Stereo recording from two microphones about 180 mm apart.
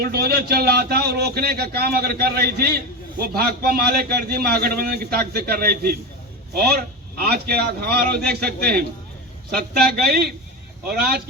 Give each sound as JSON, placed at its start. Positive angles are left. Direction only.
{"t": 0.0, "sound": "speech", "side_deg": -60}